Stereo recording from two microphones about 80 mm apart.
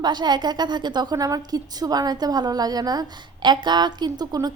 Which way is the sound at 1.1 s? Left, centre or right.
Right.